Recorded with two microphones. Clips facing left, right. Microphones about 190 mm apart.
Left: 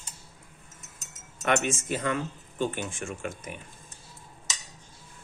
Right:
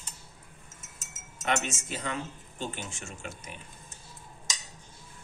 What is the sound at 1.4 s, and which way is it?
Speech, 60° left (ahead or behind).